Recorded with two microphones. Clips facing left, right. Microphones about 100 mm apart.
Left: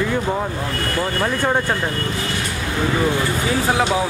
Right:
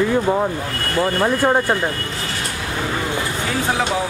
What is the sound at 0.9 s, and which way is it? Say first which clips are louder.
Speech: right 5 dB; 15° right (ahead or behind).